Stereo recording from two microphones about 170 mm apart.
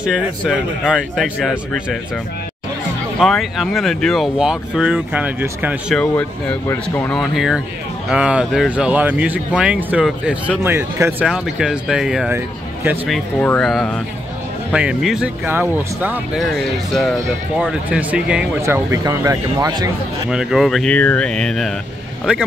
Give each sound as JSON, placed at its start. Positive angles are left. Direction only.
{"t": 0.0, "sound": "speech", "side_deg": -5}
{"t": 3.2, "sound": "speech", "side_deg": 0}
{"t": 5.9, "sound": "speech", "side_deg": 5}
{"t": 13.1, "sound": "speech", "side_deg": 5}
{"t": 16.3, "sound": "speech", "side_deg": 0}
{"t": 18.6, "sound": "speech", "side_deg": -15}
{"t": 20.2, "sound": "speech", "side_deg": -5}